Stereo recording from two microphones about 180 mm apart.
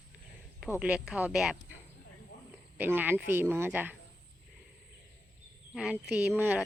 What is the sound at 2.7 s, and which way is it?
Speech, 10° right (ahead or behind).